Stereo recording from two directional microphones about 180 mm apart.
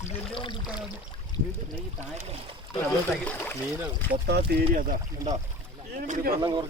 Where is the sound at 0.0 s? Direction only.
30° left (ahead or behind).